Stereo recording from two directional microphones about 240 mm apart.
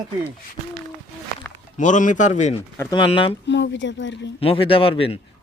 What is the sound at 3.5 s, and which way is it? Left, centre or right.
Speech, left.